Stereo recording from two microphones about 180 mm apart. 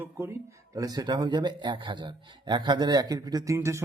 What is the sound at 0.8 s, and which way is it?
A man's voice, 20° right (ahead or behind).